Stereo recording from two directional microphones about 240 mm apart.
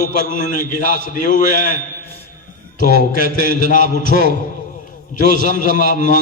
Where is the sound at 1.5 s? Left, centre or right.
Right.